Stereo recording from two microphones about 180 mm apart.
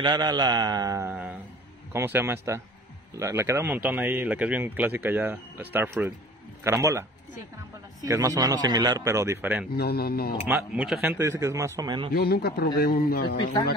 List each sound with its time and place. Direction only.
0.0 s a man's voice: 25° right (ahead or behind)
9.8 s a man's voice: 60° left (ahead or behind)
10.5 s speech: 5° right (ahead or behind); by 12.1 s 25° right (ahead or behind)
12.1 s a man's voice: 60° left (ahead or behind)